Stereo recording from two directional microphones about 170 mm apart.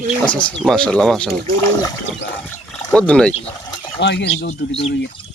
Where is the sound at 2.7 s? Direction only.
5° left (ahead or behind).